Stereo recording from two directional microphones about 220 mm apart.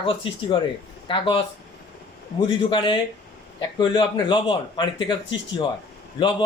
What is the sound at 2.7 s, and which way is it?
A man's voice, 20° left (ahead or behind).